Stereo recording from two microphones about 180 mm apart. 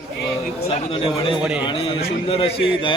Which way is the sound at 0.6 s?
30° left (ahead or behind).